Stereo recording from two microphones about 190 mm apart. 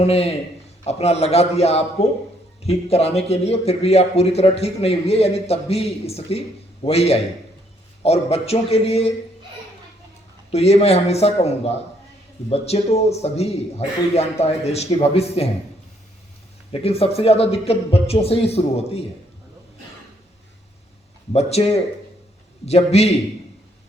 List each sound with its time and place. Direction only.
0.0 s a man's voice: 30° left (ahead or behind)
10.5 s a man's voice: 35° left (ahead or behind)
16.7 s a man's voice: 30° left (ahead or behind)
21.3 s a man's voice: 35° left (ahead or behind)